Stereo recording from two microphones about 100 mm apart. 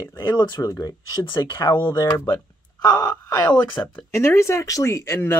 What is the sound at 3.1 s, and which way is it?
Speech, 15° left (ahead or behind).